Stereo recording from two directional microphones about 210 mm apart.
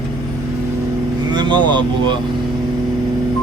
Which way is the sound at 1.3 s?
20° right (ahead or behind).